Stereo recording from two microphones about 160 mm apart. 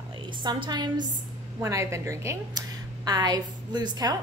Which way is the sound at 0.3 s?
30° right (ahead or behind).